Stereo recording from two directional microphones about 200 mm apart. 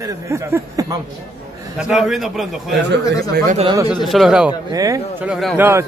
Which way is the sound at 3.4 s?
35° right (ahead or behind).